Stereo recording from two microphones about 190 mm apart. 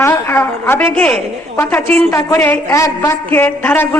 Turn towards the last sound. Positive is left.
turn(degrees=10)  # may be behind; listen again after turning